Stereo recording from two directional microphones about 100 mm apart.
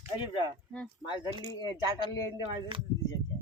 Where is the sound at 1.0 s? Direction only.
50° left (ahead or behind).